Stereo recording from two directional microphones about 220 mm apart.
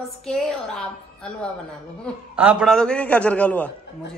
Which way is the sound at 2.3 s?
5° right (ahead or behind).